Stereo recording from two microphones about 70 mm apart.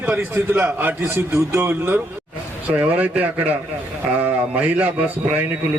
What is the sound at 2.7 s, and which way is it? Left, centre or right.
A man's voice, right.